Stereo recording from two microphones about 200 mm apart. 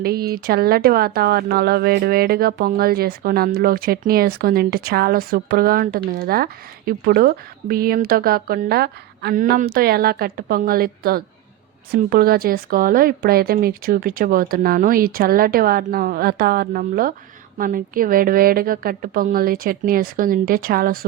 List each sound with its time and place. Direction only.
0.0 s speech: 50° right (ahead or behind)